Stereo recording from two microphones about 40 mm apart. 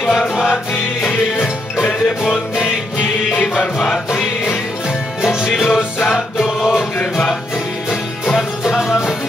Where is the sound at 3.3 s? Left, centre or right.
Left.